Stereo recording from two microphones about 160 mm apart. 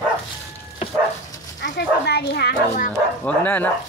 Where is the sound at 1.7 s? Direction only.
90° left; by 2.9 s 70° left (ahead or behind).